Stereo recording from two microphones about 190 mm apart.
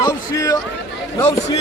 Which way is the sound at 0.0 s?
20° left (ahead or behind).